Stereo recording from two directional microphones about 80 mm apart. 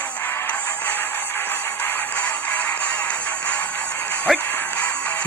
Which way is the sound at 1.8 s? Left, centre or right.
Left.